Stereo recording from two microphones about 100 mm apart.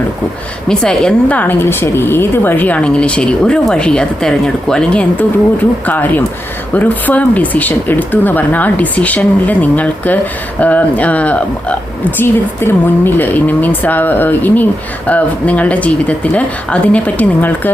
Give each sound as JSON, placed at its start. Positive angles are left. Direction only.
{"t": 0.7, "sound": "speech", "side_deg": 5}